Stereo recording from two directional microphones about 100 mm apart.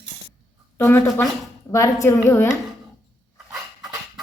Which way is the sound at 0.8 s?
25° left (ahead or behind).